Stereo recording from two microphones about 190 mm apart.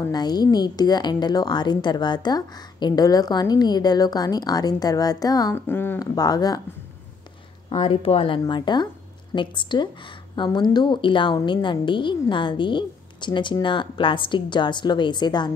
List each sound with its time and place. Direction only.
0.0 s a woman's voice: 20° left (ahead or behind)
7.7 s a woman's voice: 30° left (ahead or behind)